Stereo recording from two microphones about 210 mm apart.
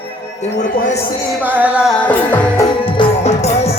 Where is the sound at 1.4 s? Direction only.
5° right (ahead or behind).